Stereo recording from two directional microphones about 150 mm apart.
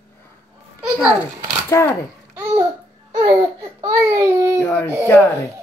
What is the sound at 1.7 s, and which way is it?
Speech, 15° left (ahead or behind).